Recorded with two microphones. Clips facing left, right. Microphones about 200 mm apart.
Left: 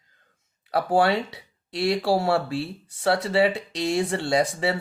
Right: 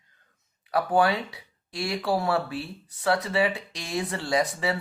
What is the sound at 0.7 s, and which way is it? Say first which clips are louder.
Speech: left 2 dB; 30° left (ahead or behind).